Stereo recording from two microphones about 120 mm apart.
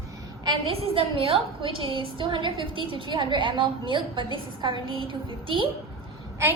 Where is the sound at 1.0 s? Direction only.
50° right (ahead or behind).